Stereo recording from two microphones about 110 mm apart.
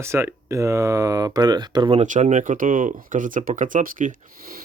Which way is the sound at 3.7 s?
90° right.